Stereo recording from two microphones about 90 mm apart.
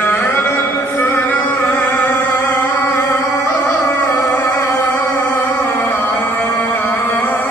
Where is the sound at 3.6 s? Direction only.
20° left (ahead or behind).